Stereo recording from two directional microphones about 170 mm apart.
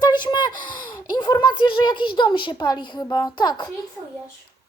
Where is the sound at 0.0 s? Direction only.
25° left (ahead or behind).